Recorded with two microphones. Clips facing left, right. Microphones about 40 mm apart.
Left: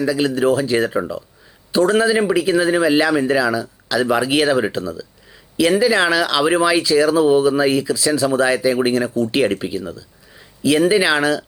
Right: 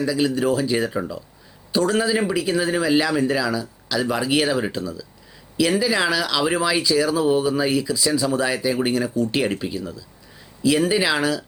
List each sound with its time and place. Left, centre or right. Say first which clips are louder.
0.0 s speech: left 3 dB; centre